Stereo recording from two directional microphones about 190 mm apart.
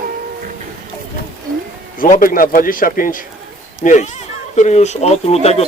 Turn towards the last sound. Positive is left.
turn(degrees=35)  # may be behind; listen again after turning